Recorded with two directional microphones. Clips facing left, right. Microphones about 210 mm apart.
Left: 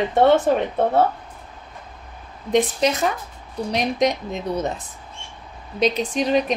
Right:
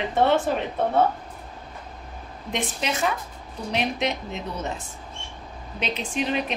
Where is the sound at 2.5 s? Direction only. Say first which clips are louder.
Left 9 dB; 40° left (ahead or behind).